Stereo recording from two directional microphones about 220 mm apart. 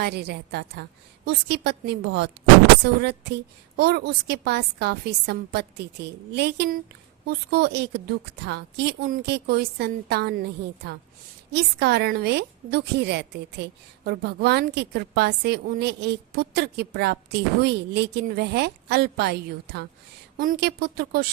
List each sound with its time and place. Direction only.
0.0 s a woman's voice: 50° right (ahead or behind)
11.5 s a woman's voice: 50° right (ahead or behind)